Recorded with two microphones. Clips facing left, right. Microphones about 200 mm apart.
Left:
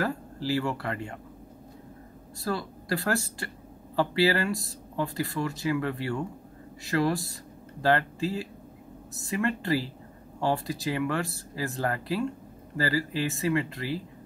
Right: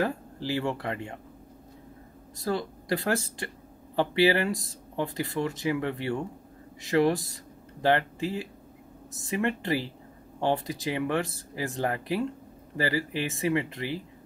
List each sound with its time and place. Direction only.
0.0 s speech: 20° right (ahead or behind)
2.3 s speech: 20° right (ahead or behind)